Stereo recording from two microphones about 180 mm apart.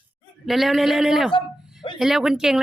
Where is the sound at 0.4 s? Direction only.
Centre (ahead or behind).